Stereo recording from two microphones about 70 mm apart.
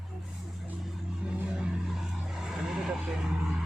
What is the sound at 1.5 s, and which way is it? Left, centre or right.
Vehicle, centre.